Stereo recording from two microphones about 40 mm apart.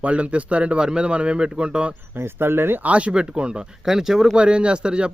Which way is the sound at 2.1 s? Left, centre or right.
Right.